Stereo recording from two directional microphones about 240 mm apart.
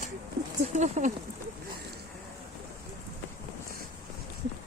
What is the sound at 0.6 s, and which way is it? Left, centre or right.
Speech, right.